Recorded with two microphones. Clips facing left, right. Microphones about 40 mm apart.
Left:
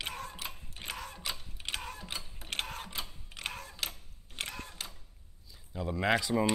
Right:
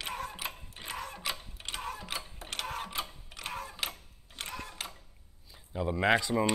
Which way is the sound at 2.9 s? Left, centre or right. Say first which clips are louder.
Right 4 dB; right.